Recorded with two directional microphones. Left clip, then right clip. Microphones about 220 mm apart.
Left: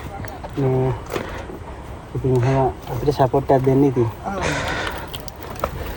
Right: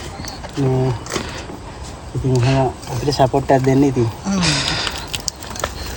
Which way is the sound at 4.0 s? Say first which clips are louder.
Right 2 dB; 10° right (ahead or behind).